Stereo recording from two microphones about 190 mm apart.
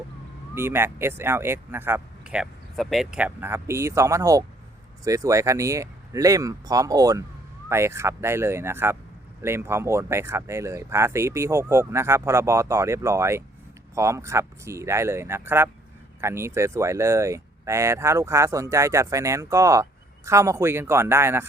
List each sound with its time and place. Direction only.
0.5 s speech: 10° right (ahead or behind)